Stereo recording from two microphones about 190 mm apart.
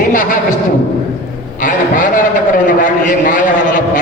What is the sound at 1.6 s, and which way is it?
A man's voice, 45° left (ahead or behind).